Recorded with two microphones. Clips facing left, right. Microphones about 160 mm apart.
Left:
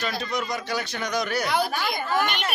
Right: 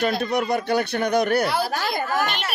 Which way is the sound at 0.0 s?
60° right (ahead or behind).